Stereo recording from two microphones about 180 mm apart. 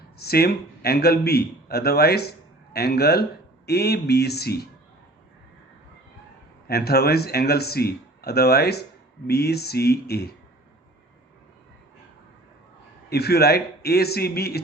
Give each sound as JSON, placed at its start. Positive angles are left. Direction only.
{"t": 0.2, "sound": "speech", "side_deg": 60}
{"t": 6.7, "sound": "speech", "side_deg": 60}
{"t": 13.1, "sound": "speech", "side_deg": 65}